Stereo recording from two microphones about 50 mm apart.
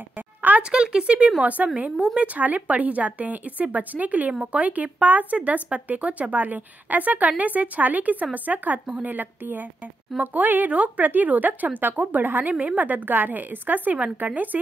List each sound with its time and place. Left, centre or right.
0.6 s speech: centre; by 14.6 s right